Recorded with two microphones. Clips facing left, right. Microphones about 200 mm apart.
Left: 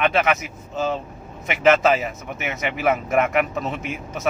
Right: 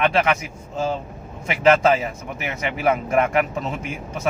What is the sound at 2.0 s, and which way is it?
A man's voice, 30° right (ahead or behind).